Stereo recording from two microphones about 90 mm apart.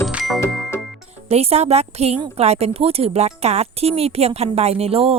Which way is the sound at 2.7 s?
90° right.